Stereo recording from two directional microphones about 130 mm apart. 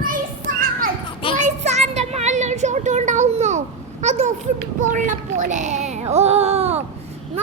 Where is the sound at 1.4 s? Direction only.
60° right (ahead or behind).